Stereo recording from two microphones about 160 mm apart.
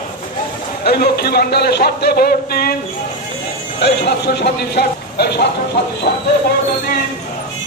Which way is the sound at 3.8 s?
90° left.